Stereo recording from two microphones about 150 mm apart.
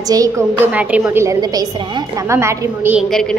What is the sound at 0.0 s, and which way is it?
Speech, 25° right (ahead or behind).